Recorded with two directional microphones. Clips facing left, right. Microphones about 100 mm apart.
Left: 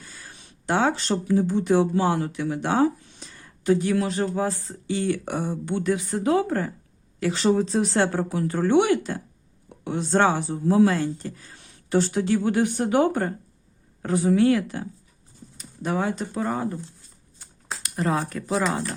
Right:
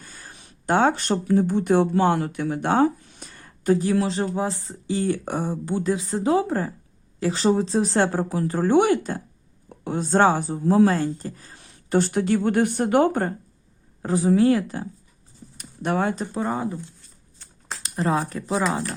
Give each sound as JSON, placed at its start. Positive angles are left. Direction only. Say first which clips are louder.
{"t": 0.0, "sound": "speech", "louder": "right 1 dB", "side_deg": -45}
{"t": 4.9, "sound": "speech", "louder": "right 1 dB", "side_deg": -35}
{"t": 11.9, "sound": "speech", "louder": "right 1 dB", "side_deg": -55}
{"t": 14.0, "sound": "speech", "louder": "right 1 dB", "side_deg": -30}
{"t": 15.5, "sound": "a sound", "louder": "right 2 dB", "side_deg": -60}
{"t": 16.3, "sound": "speech", "louder": "right 1 dB", "side_deg": -20}
{"t": 17.8, "sound": "speech", "louder": "right 2 dB", "side_deg": -30}